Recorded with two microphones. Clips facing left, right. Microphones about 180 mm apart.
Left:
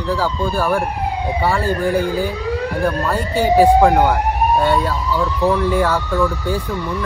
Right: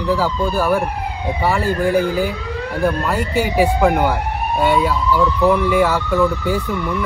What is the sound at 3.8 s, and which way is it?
Speech, 5° right (ahead or behind).